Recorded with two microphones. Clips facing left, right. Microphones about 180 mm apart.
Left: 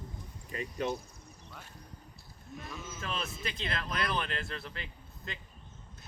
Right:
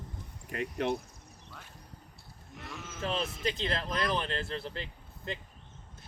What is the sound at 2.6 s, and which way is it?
Sheep, 70° right (ahead or behind).